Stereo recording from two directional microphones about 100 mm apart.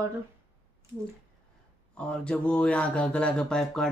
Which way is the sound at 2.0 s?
10° left (ahead or behind).